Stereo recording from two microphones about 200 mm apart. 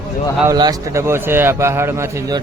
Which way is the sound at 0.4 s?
20° right (ahead or behind).